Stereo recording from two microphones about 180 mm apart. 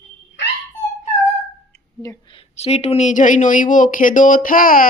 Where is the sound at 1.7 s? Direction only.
15° left (ahead or behind).